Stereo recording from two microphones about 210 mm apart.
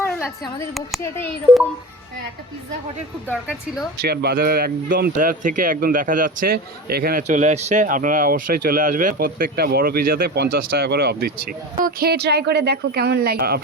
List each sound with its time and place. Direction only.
0.2 s speech: centre (ahead or behind)
4.0 s speech: 50° right (ahead or behind)